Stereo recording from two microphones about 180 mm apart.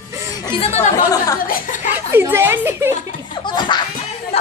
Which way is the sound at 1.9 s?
10° right (ahead or behind).